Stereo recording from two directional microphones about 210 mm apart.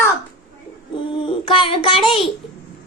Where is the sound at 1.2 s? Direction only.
25° left (ahead or behind).